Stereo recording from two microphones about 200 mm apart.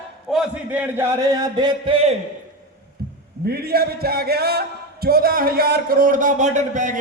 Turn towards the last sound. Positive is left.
turn(degrees=-40)  # may be behind; listen again after turning